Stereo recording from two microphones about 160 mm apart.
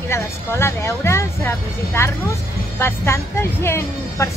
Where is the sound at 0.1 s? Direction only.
15° left (ahead or behind).